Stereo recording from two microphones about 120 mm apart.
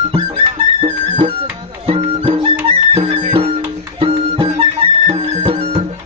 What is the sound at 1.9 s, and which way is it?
Music, 55° right (ahead or behind).